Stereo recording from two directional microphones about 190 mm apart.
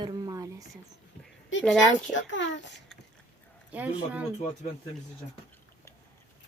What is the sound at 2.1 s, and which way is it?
Speech, 70° left (ahead or behind).